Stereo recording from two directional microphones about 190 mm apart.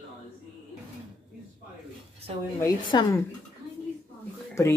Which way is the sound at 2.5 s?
15° left (ahead or behind).